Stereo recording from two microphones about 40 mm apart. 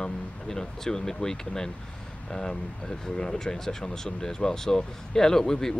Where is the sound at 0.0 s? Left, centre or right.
Centre.